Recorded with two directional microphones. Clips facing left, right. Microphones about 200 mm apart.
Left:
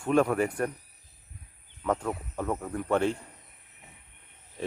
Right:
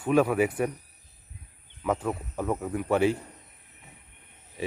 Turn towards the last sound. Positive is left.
turn(degrees=-5)  # may be behind; listen again after turning